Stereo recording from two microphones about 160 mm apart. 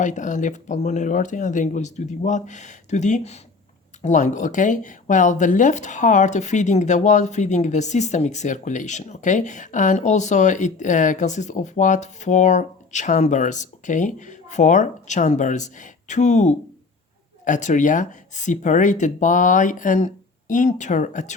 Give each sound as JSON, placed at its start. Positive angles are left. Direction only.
{"t": 0.0, "sound": "speech", "side_deg": 50}